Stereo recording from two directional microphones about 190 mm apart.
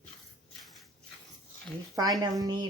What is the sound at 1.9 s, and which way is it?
Speech, 20° right (ahead or behind).